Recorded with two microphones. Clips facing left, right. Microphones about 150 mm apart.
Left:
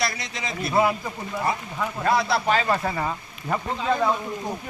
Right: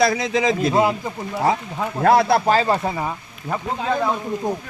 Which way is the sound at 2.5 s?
30° right (ahead or behind).